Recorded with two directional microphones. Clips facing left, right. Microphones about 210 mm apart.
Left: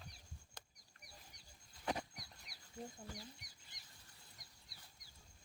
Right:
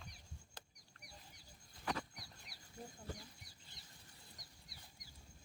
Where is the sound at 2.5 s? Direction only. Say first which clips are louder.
Right 2 dB; centre (ahead or behind).